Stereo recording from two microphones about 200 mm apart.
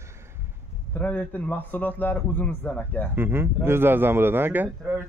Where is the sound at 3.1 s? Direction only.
10° right (ahead or behind).